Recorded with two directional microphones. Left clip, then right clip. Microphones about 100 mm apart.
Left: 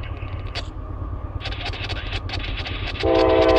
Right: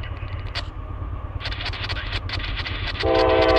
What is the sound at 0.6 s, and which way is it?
Vehicle, 20° left (ahead or behind).